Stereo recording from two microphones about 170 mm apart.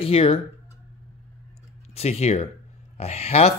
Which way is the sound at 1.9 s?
40° left (ahead or behind).